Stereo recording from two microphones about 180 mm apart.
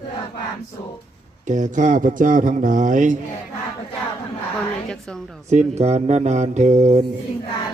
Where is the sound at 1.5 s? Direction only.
45° right (ahead or behind).